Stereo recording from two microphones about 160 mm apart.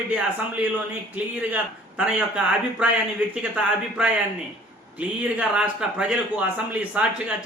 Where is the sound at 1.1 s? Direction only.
10° right (ahead or behind).